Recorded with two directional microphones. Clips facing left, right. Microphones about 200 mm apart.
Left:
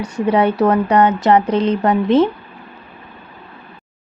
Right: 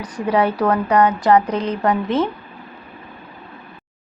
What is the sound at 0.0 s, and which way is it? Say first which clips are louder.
A woman's voice: left 3 dB; 25° left (ahead or behind).